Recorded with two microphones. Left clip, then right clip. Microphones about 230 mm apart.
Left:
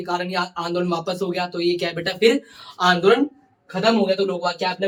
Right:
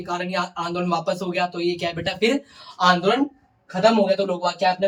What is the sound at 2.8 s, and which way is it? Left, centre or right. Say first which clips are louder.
Speech: left 1 dB; centre.